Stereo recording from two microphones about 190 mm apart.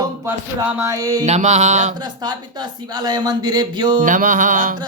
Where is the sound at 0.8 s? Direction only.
20° right (ahead or behind).